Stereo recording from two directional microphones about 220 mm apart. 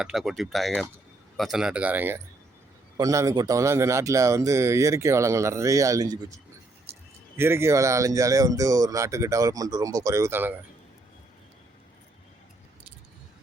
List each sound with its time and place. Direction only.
0.0 s speech: centre (ahead or behind)
6.9 s a sound: 10° right (ahead or behind)
7.3 s speech: 10° right (ahead or behind)